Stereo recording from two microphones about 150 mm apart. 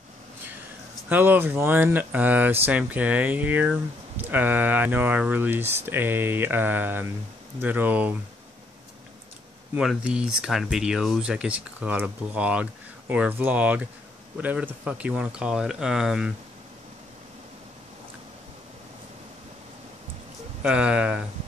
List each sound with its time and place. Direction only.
1.0 s speech: 10° right (ahead or behind)
9.8 s speech: 5° right (ahead or behind)
20.6 s speech: 5° right (ahead or behind)